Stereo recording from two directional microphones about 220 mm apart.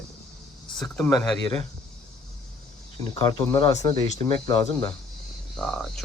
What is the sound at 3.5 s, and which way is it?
Speech, 25° left (ahead or behind).